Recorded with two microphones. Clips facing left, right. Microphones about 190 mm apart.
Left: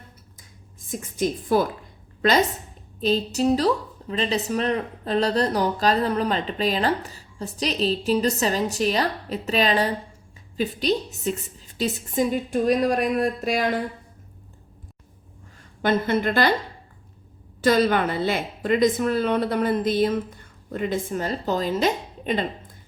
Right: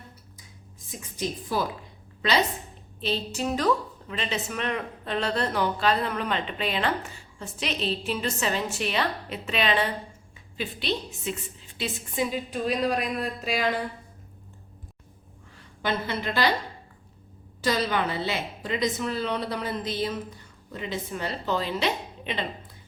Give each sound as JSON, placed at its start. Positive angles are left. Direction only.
{"t": 0.9, "sound": "a woman's voice", "side_deg": 50}
{"t": 3.0, "sound": "a woman's voice", "side_deg": 40}
{"t": 15.8, "sound": "a woman's voice", "side_deg": 50}
{"t": 17.6, "sound": "a woman's voice", "side_deg": 55}